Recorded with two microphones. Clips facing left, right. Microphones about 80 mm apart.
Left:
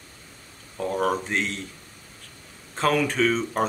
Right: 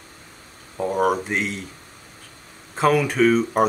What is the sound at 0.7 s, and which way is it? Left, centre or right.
Speech, centre.